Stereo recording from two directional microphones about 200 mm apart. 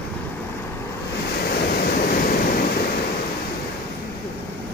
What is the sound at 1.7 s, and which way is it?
Waves, 50° left (ahead or behind).